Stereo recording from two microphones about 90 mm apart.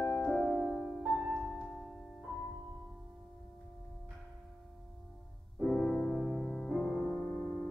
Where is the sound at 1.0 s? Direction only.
Centre (ahead or behind).